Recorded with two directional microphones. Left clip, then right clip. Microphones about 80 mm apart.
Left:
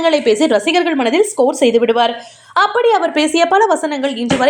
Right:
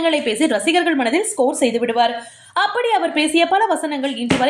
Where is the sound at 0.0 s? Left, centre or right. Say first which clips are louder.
Left 5 dB; left.